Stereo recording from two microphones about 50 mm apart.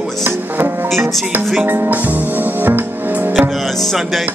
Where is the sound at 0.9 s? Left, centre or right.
Centre.